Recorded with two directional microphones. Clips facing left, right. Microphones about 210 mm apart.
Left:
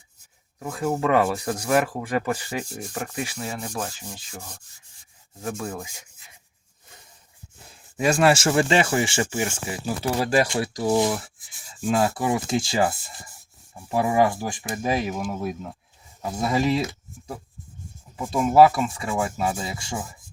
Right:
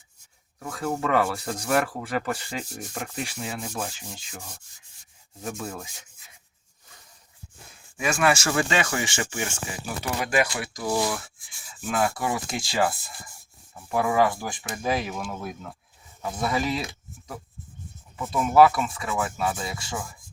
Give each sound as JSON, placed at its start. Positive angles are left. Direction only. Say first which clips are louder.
{"t": 0.6, "sound": "rub", "louder": "left 4 dB", "side_deg": 10}
{"t": 3.3, "sound": "sanding", "louder": "left 2 dB", "side_deg": -5}
{"t": 5.7, "sound": "rub", "louder": "left 3 dB", "side_deg": 10}
{"t": 7.9, "sound": "speech", "louder": "left 4 dB", "side_deg": 35}
{"t": 18.2, "sound": "speech", "louder": "left 2 dB", "side_deg": 30}